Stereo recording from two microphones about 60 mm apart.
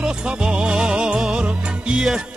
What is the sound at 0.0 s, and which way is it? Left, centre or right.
Music, centre.